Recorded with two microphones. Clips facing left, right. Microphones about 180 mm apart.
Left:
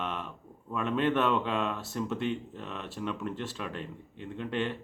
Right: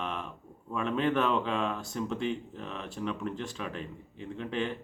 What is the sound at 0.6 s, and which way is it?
Mantra, centre (ahead or behind).